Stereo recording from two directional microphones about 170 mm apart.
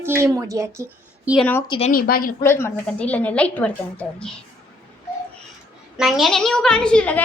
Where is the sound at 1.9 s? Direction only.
60° left (ahead or behind).